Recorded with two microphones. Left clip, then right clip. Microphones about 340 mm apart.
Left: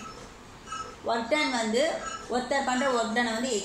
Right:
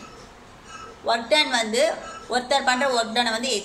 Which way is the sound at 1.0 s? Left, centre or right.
Right.